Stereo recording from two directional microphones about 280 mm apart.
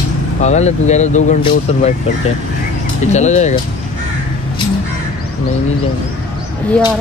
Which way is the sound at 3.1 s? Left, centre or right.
Left.